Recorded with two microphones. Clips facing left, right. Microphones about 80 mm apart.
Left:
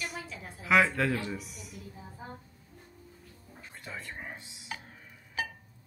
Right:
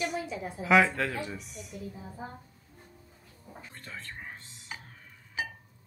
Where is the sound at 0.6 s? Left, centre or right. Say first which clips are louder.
Right 2 dB; centre.